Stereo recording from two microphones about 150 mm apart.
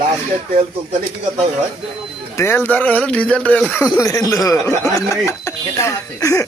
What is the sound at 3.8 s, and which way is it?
A man's voice, 20° left (ahead or behind).